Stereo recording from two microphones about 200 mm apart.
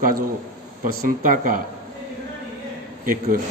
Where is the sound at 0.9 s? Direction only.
45° right (ahead or behind).